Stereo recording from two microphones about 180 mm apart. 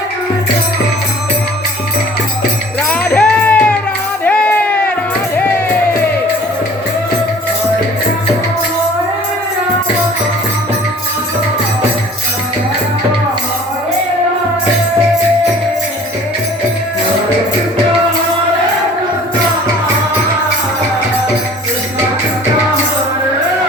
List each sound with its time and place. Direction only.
3.0 s music: 10° left (ahead or behind)